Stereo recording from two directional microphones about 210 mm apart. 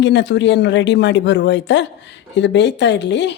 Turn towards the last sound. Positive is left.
turn(degrees=55)  # may be behind; listen again after turning